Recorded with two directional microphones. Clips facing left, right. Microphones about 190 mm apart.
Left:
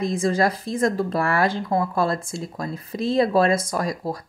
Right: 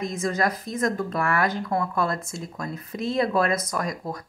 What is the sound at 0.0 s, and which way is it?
Speech, 30° left (ahead or behind).